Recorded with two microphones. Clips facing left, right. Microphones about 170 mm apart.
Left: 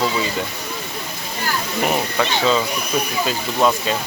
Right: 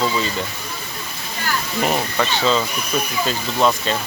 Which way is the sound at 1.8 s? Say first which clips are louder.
Even; 5° left (ahead or behind).